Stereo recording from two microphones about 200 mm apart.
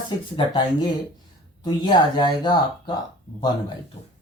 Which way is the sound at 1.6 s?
20° left (ahead or behind).